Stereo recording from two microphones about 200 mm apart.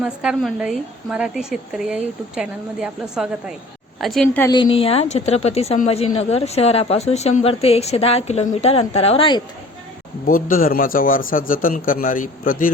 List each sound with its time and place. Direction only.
0.0 s a woman's voice: 5° right (ahead or behind)
4.4 s a woman's voice: 25° left (ahead or behind)
10.2 s a man's voice: 45° left (ahead or behind)